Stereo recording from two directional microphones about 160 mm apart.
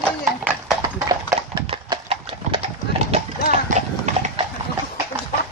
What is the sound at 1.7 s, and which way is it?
Clip-clop, 35° right (ahead or behind).